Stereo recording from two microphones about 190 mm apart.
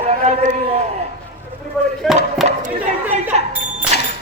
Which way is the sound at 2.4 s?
35° right (ahead or behind).